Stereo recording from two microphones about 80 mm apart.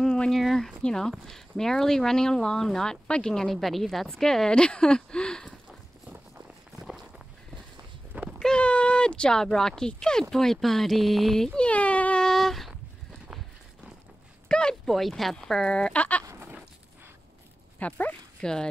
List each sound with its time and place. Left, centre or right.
0.0 s speech: centre
8.1 s a sound: centre
8.4 s speech: centre
12.3 s a sound: centre
14.5 s speech: centre
17.7 s speech: centre
18.4 s speech: centre